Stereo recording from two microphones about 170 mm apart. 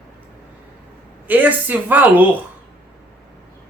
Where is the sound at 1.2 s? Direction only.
10° right (ahead or behind).